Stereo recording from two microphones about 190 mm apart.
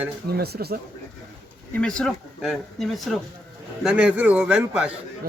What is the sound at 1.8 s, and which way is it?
A man's voice, 5° left (ahead or behind).